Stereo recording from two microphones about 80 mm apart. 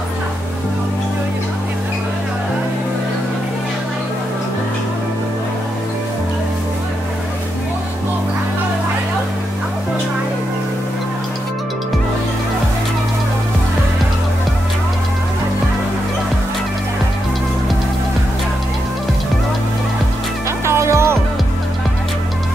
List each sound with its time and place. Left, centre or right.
20.6 s music: right